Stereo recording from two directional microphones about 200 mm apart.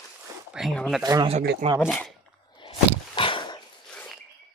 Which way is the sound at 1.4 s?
45° right (ahead or behind).